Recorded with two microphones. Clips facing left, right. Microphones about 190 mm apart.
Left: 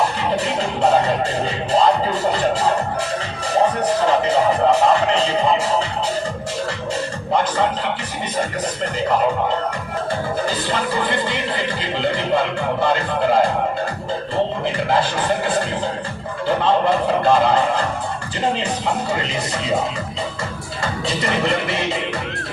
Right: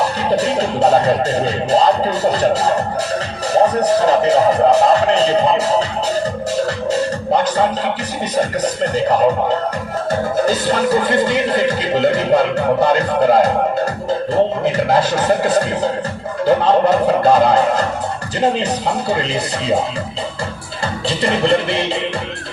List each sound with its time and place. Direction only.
0.3 s speech: 40° right (ahead or behind)
10.1 s music: 45° right (ahead or behind)
14.8 s speech: 40° right (ahead or behind)
20.8 s music: 30° right (ahead or behind)